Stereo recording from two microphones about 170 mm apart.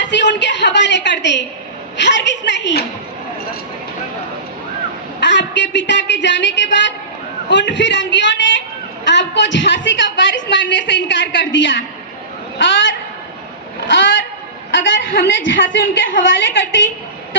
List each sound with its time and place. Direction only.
0.0 s a woman's voice: 90° left
5.2 s a woman's voice: 90° left